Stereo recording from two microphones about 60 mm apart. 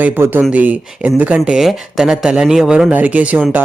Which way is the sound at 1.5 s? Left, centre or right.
Centre.